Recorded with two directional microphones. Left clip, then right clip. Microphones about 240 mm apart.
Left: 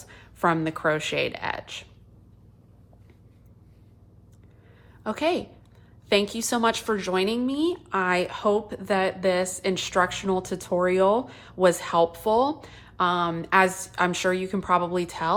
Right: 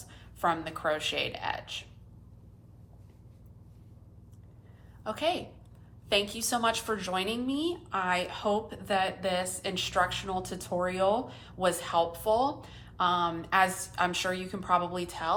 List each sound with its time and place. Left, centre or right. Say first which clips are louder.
0.1 s a woman's voice: left 5 dB; left
5.0 s a woman's voice: left 5 dB; left